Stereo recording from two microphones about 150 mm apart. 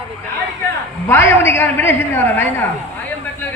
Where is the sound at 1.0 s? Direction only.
15° left (ahead or behind).